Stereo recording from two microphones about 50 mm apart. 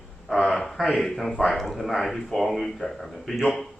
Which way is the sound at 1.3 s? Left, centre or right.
Left.